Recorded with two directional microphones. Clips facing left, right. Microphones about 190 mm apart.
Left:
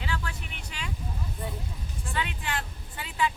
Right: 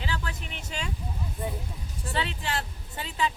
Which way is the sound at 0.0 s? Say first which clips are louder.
Right 1 dB; 30° right (ahead or behind).